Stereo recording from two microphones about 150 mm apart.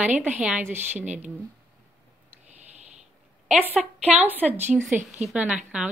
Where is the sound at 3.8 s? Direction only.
10° right (ahead or behind).